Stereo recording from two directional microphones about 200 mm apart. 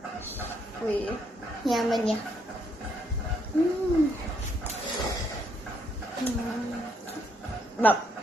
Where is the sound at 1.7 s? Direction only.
Centre (ahead or behind).